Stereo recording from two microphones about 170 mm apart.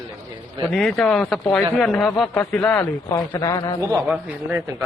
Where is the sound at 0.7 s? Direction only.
Centre (ahead or behind).